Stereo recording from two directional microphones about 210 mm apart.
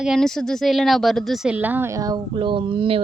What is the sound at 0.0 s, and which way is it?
Speech, centre (ahead or behind).